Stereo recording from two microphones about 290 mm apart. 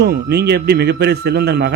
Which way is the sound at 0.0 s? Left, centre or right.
Right.